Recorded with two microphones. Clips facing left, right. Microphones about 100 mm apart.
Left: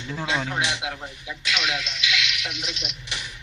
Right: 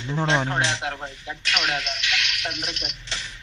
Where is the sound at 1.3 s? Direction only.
40° right (ahead or behind).